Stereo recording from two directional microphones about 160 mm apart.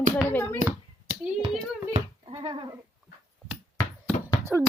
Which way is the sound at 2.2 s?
35° right (ahead or behind).